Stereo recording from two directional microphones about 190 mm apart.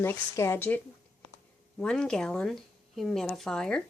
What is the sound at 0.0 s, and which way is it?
Speech, 15° left (ahead or behind).